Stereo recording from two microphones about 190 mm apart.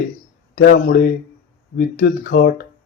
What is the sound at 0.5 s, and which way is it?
A man's voice, 55° left (ahead or behind).